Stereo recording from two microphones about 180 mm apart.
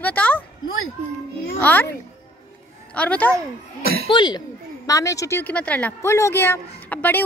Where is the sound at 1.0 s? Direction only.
35° right (ahead or behind).